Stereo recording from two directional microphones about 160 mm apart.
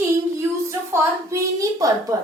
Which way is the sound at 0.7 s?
20° right (ahead or behind).